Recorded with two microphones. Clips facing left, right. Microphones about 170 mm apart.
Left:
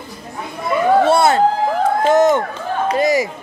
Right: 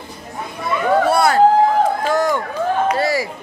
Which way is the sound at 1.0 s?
25° left (ahead or behind).